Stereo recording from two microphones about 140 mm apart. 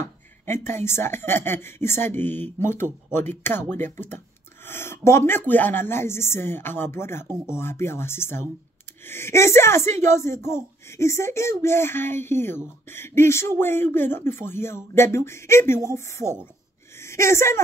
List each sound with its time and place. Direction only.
0.0 s a woman's voice: 15° left (ahead or behind)